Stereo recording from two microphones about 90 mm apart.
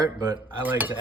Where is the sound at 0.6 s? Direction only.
20° right (ahead or behind).